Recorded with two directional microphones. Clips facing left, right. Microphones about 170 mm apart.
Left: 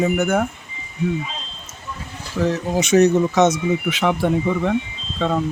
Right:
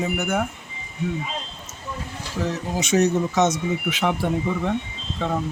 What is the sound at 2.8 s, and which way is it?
Speech, 60° left (ahead or behind).